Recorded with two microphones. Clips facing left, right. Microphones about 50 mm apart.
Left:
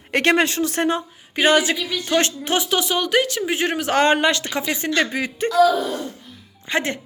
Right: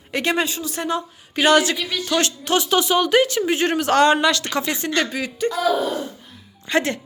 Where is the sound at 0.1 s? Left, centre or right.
Left.